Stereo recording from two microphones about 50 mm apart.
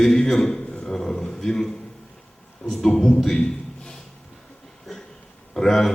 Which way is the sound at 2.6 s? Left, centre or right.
Centre.